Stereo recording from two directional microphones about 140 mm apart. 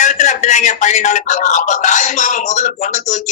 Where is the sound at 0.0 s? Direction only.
60° left (ahead or behind).